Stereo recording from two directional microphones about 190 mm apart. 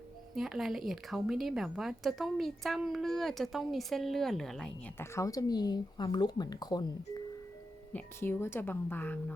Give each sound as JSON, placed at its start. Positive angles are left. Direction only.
{"t": 0.3, "sound": "a woman's voice", "side_deg": 0}
{"t": 5.1, "sound": "speech", "side_deg": 15}